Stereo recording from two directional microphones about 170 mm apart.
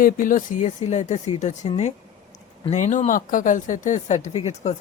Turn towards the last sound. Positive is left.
turn(degrees=40)  # may be behind; listen again after turning